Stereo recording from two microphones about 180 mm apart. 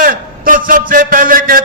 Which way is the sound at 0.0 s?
50° right (ahead or behind).